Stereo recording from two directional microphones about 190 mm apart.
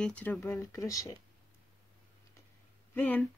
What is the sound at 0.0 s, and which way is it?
Speech, 5° left (ahead or behind).